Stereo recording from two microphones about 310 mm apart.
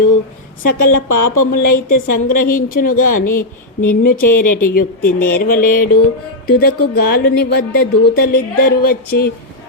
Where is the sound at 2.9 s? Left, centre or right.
Left.